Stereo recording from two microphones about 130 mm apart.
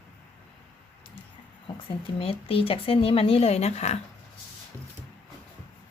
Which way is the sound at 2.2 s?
45° left (ahead or behind).